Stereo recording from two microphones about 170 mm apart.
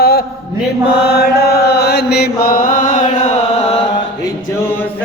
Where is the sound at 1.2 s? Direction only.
70° left (ahead or behind); by 3.0 s 50° left (ahead or behind).